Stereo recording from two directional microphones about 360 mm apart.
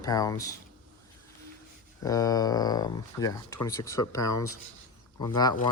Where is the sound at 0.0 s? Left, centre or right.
Centre.